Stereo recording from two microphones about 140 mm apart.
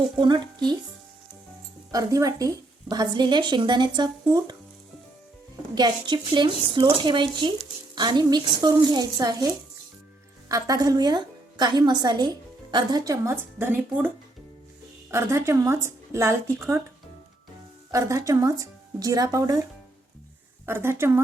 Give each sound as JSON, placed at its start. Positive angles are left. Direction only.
{"t": 0.2, "sound": "speech", "side_deg": -35}
{"t": 1.9, "sound": "a woman's voice", "side_deg": -25}
{"t": 5.7, "sound": "a woman's voice", "side_deg": -30}
{"t": 10.5, "sound": "a woman's voice", "side_deg": -25}
{"t": 15.1, "sound": "a woman's voice", "side_deg": -20}
{"t": 17.9, "sound": "a woman's voice", "side_deg": -20}
{"t": 20.7, "sound": "a woman's voice", "side_deg": -15}